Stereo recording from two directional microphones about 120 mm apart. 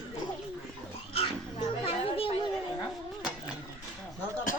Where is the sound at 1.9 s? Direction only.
50° left (ahead or behind).